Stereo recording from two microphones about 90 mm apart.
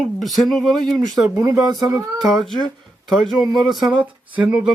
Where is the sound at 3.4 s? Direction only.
50° right (ahead or behind).